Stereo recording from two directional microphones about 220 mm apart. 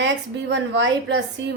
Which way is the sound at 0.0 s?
55° right (ahead or behind).